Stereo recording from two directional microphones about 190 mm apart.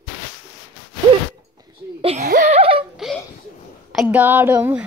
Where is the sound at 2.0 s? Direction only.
30° right (ahead or behind).